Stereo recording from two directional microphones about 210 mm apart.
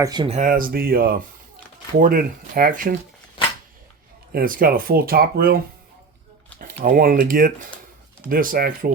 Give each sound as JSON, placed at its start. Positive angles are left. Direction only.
{"t": 0.0, "sound": "speech", "side_deg": -20}
{"t": 0.3, "sound": "speech", "side_deg": -35}
{"t": 4.3, "sound": "speech", "side_deg": -45}
{"t": 6.6, "sound": "speech", "side_deg": -40}